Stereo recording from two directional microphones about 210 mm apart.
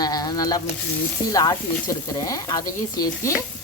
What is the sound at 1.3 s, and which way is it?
Sizzle, 15° left (ahead or behind).